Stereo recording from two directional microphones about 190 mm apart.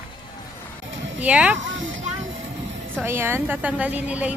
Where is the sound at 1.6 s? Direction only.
85° right.